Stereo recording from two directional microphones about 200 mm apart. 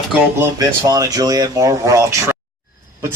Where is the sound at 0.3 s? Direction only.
20° right (ahead or behind).